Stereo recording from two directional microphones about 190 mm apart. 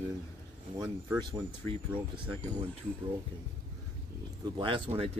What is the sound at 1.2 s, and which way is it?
Speech, 25° right (ahead or behind).